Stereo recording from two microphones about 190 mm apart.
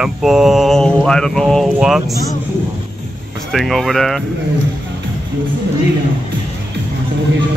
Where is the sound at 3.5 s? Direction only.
Centre (ahead or behind).